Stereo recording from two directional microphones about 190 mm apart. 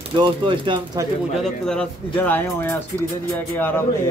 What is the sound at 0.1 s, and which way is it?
Speech, 25° right (ahead or behind).